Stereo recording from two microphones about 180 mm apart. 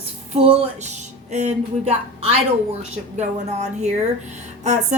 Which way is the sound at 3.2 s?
40° right (ahead or behind).